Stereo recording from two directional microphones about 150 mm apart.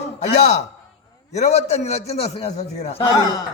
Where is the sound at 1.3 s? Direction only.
50° left (ahead or behind).